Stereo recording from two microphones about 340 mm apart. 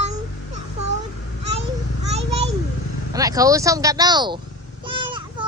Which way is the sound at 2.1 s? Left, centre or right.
Centre.